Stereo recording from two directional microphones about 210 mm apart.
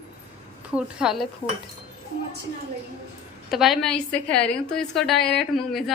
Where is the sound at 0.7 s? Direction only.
5° right (ahead or behind).